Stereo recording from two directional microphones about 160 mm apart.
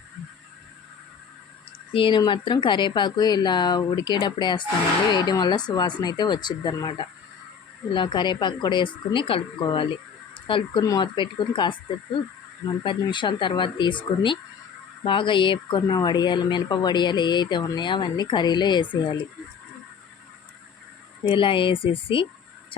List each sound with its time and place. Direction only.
1.9 s speech: 35° left (ahead or behind)
21.2 s speech: 30° left (ahead or behind)